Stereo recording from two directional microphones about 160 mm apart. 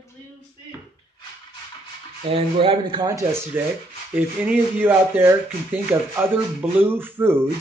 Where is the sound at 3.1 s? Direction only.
15° right (ahead or behind).